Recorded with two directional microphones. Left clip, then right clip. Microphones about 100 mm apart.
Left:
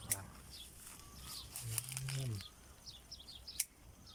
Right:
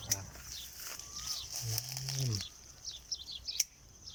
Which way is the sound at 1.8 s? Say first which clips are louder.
Right 3 dB; 70° right (ahead or behind).